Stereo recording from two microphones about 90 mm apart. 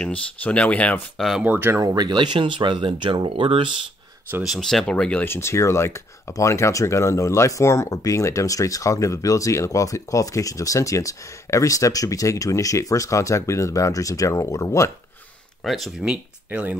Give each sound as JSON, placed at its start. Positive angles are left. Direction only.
{"t": 0.0, "sound": "speech", "side_deg": 15}
{"t": 1.1, "sound": "speech", "side_deg": 0}
{"t": 1.4, "sound": "speech", "side_deg": -20}
{"t": 1.8, "sound": "speech", "side_deg": -40}
{"t": 2.0, "sound": "speech", "side_deg": -60}
{"t": 4.4, "sound": "speech", "side_deg": 0}
{"t": 5.2, "sound": "speech", "side_deg": 30}
{"t": 15.6, "sound": "speech", "side_deg": 0}
{"t": 16.0, "sound": "speech", "side_deg": -15}